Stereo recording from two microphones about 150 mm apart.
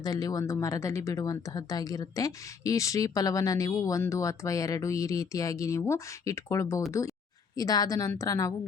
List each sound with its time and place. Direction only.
0.0 s speech: 25° left (ahead or behind)